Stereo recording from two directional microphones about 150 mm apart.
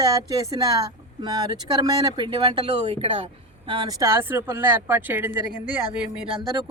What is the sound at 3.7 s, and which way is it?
Speech, 30° right (ahead or behind).